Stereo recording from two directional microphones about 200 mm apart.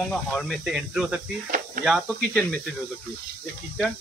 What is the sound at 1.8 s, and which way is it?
Speech, 45° right (ahead or behind).